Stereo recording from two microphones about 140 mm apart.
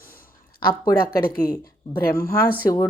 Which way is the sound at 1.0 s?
90° left.